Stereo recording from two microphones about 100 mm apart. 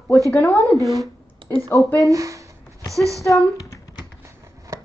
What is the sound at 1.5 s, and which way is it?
Speech, 20° left (ahead or behind).